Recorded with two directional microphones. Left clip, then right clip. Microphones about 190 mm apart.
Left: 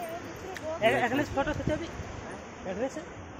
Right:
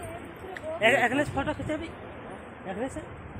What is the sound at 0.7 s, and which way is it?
Speech, 55° right (ahead or behind).